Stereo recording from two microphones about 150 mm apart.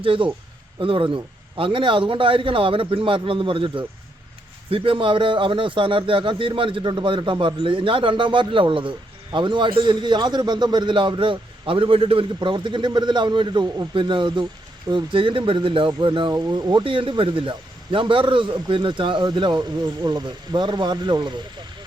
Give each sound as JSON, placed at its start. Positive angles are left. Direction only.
{"t": 0.0, "sound": "speech", "side_deg": -35}